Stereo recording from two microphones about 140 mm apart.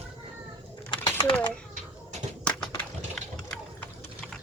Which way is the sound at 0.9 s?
25° left (ahead or behind).